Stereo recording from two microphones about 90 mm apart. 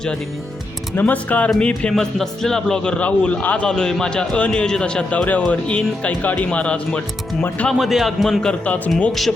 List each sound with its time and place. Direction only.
0.9 s a man's voice: 20° left (ahead or behind)
7.7 s a man's voice: centre (ahead or behind); by 8.9 s 15° left (ahead or behind)